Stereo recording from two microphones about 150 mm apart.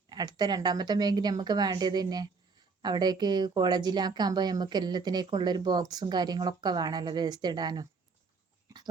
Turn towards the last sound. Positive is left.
turn(degrees=-30)  # may be behind; listen again after turning